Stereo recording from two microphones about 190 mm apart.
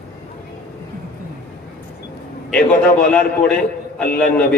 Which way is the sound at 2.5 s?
5° left (ahead or behind).